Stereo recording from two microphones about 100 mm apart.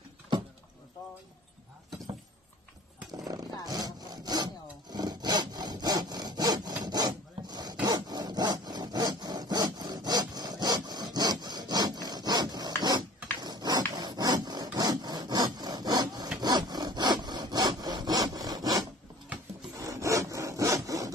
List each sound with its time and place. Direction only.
3.3 s sawing: 40° right (ahead or behind)
6.8 s zipper: 45° right (ahead or behind)
7.8 s wood: 40° right (ahead or behind)
12.8 s dog: 45° right (ahead or behind)
16.3 s sawing: 45° right (ahead or behind)